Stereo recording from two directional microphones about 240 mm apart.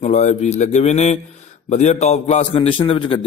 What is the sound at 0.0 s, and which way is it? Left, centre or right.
A man's voice, left.